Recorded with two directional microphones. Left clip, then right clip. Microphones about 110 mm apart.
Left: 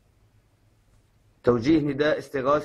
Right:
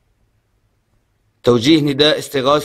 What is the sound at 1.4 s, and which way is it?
Speech, 25° right (ahead or behind).